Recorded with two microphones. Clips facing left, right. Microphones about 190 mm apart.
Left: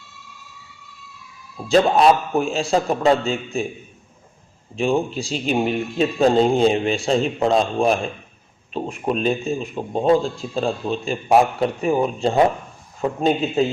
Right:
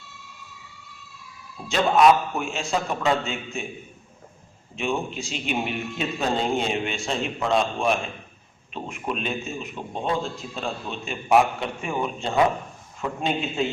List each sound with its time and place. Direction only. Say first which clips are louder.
1.6 s a man's voice: left 3 dB; 35° left (ahead or behind)
4.8 s a man's voice: left 7 dB; 35° left (ahead or behind)